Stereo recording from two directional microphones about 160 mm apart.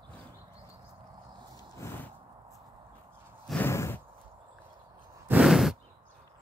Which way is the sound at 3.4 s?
10° left (ahead or behind).